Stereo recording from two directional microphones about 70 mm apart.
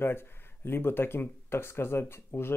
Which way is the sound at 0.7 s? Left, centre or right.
Left.